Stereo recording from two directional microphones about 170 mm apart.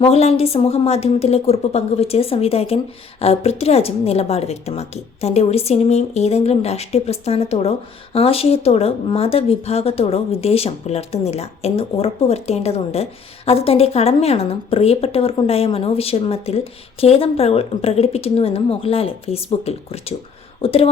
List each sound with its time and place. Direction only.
0.0 s speech: 35° left (ahead or behind)